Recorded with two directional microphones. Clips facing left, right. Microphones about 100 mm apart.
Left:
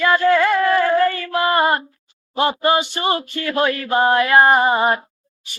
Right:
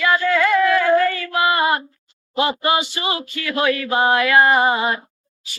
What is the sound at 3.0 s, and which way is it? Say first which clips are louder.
Speech: left 4 dB; 40° left (ahead or behind).